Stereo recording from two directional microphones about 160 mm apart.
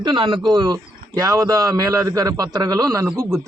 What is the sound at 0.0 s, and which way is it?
Speech, 30° right (ahead or behind).